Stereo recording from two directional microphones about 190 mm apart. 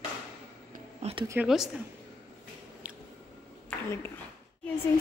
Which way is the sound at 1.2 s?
10° right (ahead or behind).